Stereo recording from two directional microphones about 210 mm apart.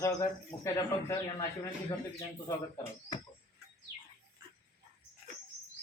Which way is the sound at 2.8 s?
15° left (ahead or behind).